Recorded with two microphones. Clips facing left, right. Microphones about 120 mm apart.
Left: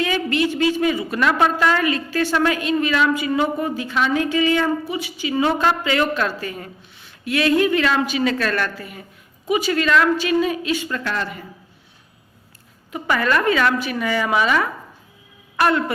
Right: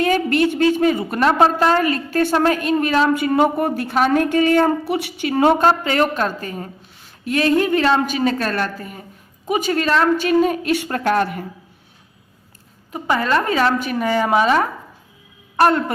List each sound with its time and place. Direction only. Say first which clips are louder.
0.0 s a woman's voice: right 4 dB; 45° right (ahead or behind)
1.2 s a woman's voice: right 3 dB; 35° right (ahead or behind)
3.1 s a woman's voice: right 4 dB; 55° right (ahead or behind)
4.9 s a woman's voice: right 4 dB; 65° right (ahead or behind)
5.6 s a woman's voice: right 3 dB; 40° right (ahead or behind)
10.2 s a woman's voice: right 3 dB; 45° right (ahead or behind)
12.9 s a woman's voice: right 1 dB; 30° right (ahead or behind)